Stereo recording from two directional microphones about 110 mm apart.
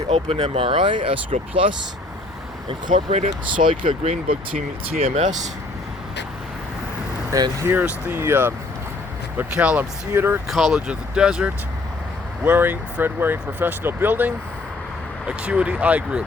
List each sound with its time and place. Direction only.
0.1 s speech: 75° right (ahead or behind)
3.6 s speech: 90° right
4.9 s speech: 75° right (ahead or behind)
7.3 s speech: 35° right (ahead or behind)
10.5 s speech: centre (ahead or behind)
12.5 s speech: 20° right (ahead or behind)